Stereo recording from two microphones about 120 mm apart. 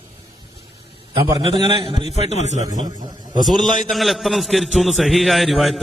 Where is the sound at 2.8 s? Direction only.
40° right (ahead or behind).